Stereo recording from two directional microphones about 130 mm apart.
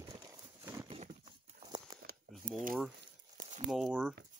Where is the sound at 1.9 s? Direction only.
30° right (ahead or behind).